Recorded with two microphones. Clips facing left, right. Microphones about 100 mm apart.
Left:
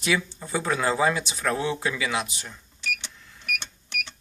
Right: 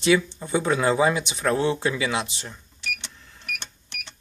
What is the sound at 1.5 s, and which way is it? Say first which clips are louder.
Speech: right 4 dB; 30° right (ahead or behind).